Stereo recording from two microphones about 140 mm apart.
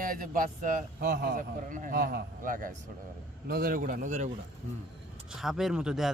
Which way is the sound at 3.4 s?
90° right.